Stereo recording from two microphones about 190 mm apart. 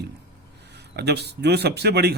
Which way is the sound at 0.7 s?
60° right (ahead or behind).